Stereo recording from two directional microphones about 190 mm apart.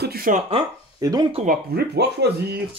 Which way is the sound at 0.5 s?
20° right (ahead or behind).